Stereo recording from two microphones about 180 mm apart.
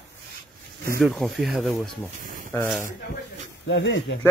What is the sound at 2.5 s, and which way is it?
Speech, 10° left (ahead or behind).